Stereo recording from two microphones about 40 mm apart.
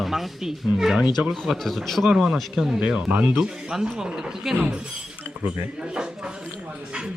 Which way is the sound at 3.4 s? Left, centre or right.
Centre.